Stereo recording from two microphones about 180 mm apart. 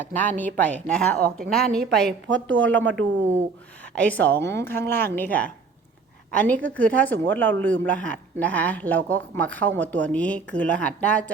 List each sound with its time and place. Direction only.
0.0 s a woman's voice: 10° left (ahead or behind)
2.2 s a woman's voice: 90° right
2.7 s a woman's voice: 10° left (ahead or behind)